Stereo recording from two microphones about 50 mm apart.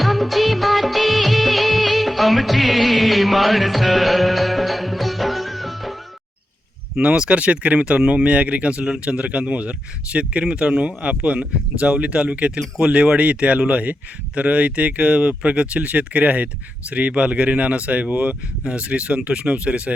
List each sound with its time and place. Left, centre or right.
0.0 s music of bollywood: centre
6.9 s speech: centre